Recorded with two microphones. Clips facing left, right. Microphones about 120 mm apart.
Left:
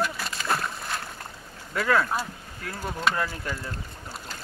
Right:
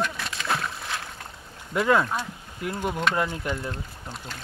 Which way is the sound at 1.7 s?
20° right (ahead or behind).